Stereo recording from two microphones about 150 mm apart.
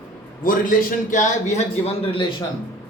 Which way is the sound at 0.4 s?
65° left (ahead or behind).